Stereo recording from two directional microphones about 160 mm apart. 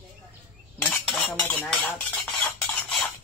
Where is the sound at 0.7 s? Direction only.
5° left (ahead or behind).